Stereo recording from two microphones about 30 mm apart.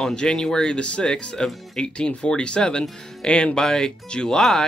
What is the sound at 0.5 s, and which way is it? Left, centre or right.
Speech, centre.